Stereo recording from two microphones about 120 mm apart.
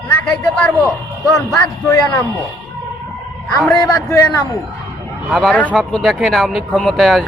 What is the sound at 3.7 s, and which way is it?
Speech, 25° left (ahead or behind).